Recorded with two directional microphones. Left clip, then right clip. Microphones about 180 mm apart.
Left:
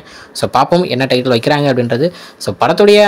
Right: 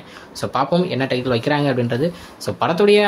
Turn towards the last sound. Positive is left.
turn(degrees=30)  # may be behind; listen again after turning